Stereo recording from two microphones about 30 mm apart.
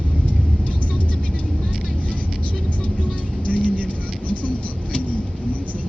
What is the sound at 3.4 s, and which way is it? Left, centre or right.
Vehicle, left.